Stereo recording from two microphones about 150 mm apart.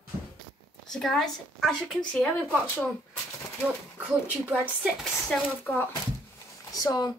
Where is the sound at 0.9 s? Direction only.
Centre (ahead or behind).